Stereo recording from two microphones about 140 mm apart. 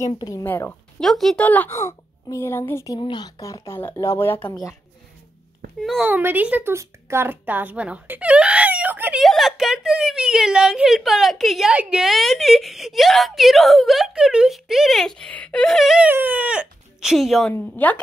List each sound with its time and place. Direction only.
0.0 s a woman's voice: 25° left (ahead or behind)
1.0 s a woman's voice: centre (ahead or behind); by 3.0 s 20° left (ahead or behind)
3.0 s speech: 30° left (ahead or behind); by 4.6 s 15° left (ahead or behind)
5.8 s a woman's voice: centre (ahead or behind)
6.0 s a woman's voice: 10° right (ahead or behind)
9.2 s a woman's voice: centre (ahead or behind)
16.1 s speech: 15° right (ahead or behind)
17.5 s a woman's voice: 10° left (ahead or behind)